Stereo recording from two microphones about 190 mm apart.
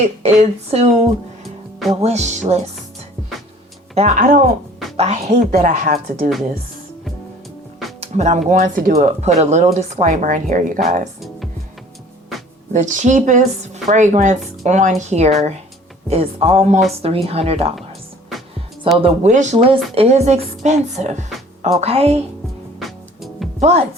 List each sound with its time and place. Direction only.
0.0 s speech: 35° right (ahead or behind)
2.0 s speech: 35° right (ahead or behind)
3.9 s speech: 40° right (ahead or behind)
8.0 s speech: 35° right (ahead or behind)
12.7 s speech: 40° right (ahead or behind)
19.0 s speech: 40° right (ahead or behind)
22.8 s music: centre (ahead or behind)
23.6 s speech: 35° right (ahead or behind)